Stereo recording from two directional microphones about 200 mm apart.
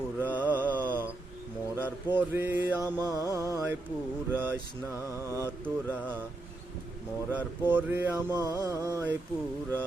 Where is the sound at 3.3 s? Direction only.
15° right (ahead or behind).